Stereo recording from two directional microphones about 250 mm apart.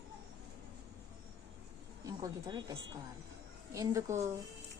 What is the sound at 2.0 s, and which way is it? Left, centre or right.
Speech, centre.